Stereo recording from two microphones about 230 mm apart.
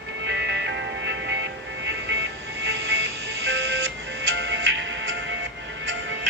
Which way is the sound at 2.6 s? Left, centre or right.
Right.